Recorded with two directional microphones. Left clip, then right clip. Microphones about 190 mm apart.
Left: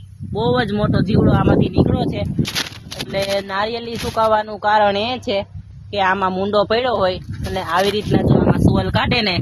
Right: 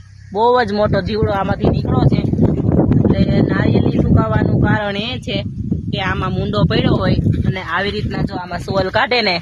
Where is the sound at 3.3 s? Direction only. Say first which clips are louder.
Right 3 dB; 25° right (ahead or behind).